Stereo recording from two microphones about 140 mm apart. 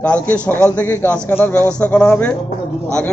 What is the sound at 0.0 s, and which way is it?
A man's voice, 10° left (ahead or behind).